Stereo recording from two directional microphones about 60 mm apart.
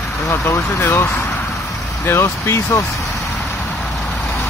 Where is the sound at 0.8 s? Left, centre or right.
Left.